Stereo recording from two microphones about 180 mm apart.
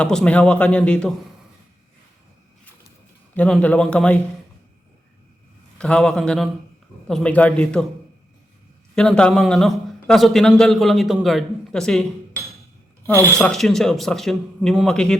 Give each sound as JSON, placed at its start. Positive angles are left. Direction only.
{"t": 0.0, "sound": "speech", "side_deg": 5}
{"t": 3.3, "sound": "speech", "side_deg": 10}
{"t": 5.8, "sound": "a man's voice", "side_deg": 5}
{"t": 9.0, "sound": "a man's voice", "side_deg": 5}
{"t": 13.0, "sound": "speech", "side_deg": -20}
{"t": 13.4, "sound": "a man's voice", "side_deg": 0}